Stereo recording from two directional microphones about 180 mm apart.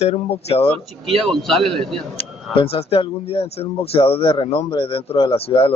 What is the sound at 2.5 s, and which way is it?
Speech, 30° left (ahead or behind).